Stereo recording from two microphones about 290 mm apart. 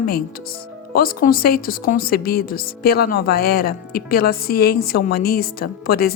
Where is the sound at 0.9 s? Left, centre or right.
Left.